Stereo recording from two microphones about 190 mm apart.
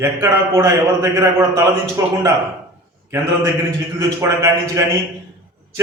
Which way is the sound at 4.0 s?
15° right (ahead or behind).